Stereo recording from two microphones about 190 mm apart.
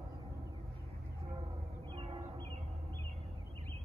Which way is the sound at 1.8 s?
25° right (ahead or behind).